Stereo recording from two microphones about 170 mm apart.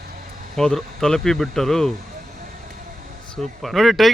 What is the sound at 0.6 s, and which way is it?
A man's voice, 5° left (ahead or behind).